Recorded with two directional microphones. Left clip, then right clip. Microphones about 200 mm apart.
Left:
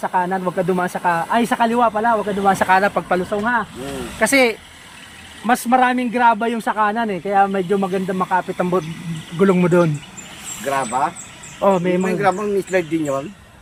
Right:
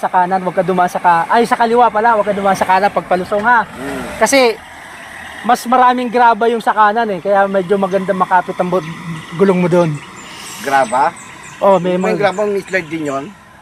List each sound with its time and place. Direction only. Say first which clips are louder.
0.0 s speech: right 6 dB; 20° left (ahead or behind)